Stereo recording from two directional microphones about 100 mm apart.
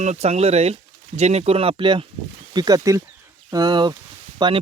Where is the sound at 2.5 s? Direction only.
40° right (ahead or behind).